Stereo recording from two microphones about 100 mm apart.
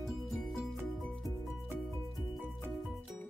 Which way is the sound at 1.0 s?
5° left (ahead or behind).